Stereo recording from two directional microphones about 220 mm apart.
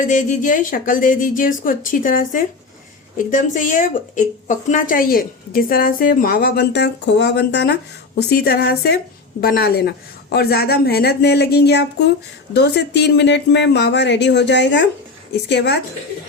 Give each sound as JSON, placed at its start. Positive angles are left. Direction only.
{"t": 0.0, "sound": "a woman's voice", "side_deg": 35}